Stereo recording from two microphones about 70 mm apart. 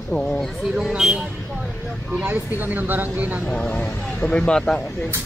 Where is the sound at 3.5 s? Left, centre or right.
Centre.